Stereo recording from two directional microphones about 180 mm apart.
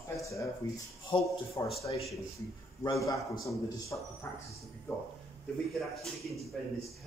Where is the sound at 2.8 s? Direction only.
15° left (ahead or behind).